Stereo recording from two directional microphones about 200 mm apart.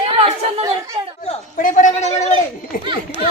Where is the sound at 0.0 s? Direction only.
25° right (ahead or behind).